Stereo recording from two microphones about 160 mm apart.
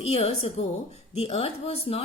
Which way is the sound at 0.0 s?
40° left (ahead or behind).